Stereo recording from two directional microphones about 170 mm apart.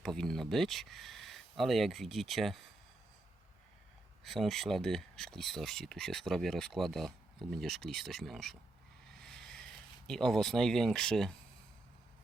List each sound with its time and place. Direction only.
0.0 s speech: 5° left (ahead or behind)
4.2 s speech: centre (ahead or behind)
9.2 s a sound: 5° left (ahead or behind)
10.1 s speech: 5° left (ahead or behind)